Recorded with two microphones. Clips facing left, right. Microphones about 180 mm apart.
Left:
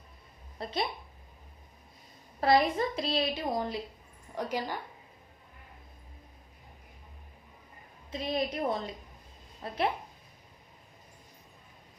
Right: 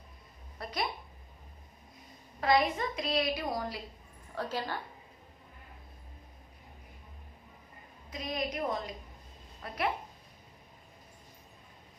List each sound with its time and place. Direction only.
0.6 s a woman's voice: 25° left (ahead or behind)
2.4 s a woman's voice: 35° left (ahead or behind); by 4.8 s 15° left (ahead or behind)
8.1 s a woman's voice: 30° left (ahead or behind)